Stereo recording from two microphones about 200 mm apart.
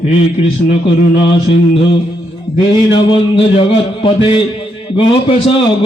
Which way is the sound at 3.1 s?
25° left (ahead or behind).